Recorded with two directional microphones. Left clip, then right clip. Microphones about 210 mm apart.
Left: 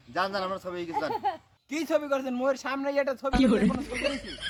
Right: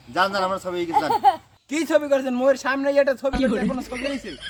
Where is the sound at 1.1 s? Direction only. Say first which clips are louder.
Right 12 dB; 30° right (ahead or behind).